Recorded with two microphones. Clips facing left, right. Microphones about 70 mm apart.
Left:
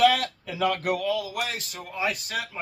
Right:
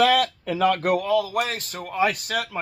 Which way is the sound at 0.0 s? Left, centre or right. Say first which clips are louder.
Right 2 dB; right.